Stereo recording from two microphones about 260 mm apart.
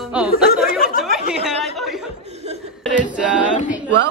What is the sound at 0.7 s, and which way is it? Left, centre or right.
Speech, left.